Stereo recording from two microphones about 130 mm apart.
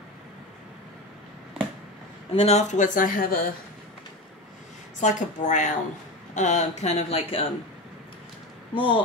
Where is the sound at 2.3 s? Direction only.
60° left (ahead or behind); by 3.4 s 90° left.